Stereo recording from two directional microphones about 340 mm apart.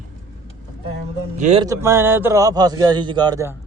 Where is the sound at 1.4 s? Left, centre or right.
Centre.